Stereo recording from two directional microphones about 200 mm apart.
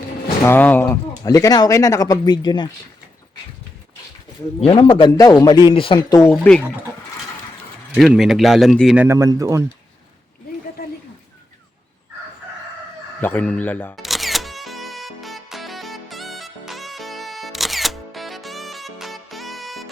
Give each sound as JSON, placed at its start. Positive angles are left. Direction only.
{"t": 0.4, "sound": "speech", "side_deg": 10}
{"t": 4.6, "sound": "a man's voice", "side_deg": 25}
{"t": 6.3, "sound": "speech", "side_deg": 5}
{"t": 7.9, "sound": "speech", "side_deg": 0}
{"t": 9.0, "sound": "speech", "side_deg": -15}
{"t": 13.2, "sound": "speech", "side_deg": 5}
{"t": 14.0, "sound": "music", "side_deg": 0}